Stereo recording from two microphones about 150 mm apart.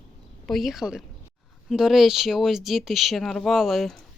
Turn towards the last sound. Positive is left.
turn(degrees=0)  # may be behind; listen again after turning